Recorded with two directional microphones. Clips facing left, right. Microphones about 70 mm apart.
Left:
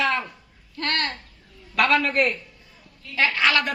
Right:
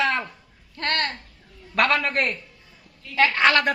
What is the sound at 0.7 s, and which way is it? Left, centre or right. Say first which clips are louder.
A woman's voice: right 1 dB; right.